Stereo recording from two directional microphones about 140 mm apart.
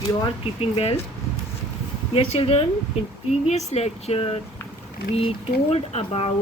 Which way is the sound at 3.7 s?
50° left (ahead or behind).